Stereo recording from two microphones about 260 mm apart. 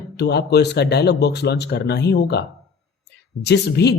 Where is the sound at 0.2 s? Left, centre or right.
Left.